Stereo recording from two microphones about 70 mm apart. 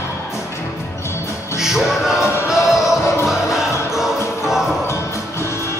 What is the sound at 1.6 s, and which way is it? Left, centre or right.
Music, centre.